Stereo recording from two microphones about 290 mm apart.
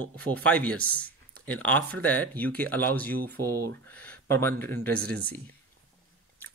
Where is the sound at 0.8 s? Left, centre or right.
Right.